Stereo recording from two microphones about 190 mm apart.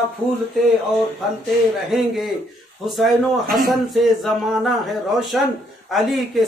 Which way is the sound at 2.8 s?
Centre (ahead or behind).